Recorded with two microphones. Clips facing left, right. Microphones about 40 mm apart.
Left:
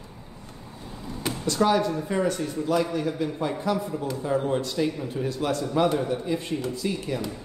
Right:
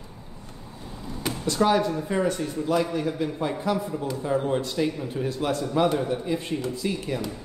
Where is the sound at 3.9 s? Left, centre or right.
Centre.